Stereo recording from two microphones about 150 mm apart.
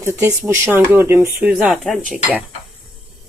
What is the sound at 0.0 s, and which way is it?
Speech, 15° right (ahead or behind).